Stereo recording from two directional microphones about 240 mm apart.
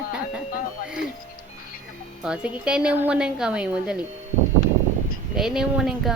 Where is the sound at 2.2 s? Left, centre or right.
Centre.